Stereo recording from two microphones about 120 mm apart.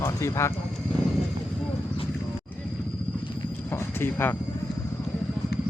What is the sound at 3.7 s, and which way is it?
Speech, 15° left (ahead or behind).